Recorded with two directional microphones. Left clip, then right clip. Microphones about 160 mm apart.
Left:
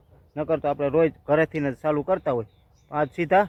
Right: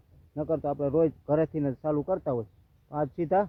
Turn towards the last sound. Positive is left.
turn(degrees=5)  # may be behind; listen again after turning